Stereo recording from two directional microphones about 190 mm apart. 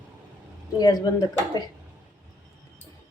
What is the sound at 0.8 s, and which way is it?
Speech, 20° left (ahead or behind).